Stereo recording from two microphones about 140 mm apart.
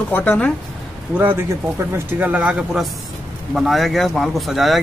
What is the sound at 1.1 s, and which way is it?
Speech, 15° right (ahead or behind).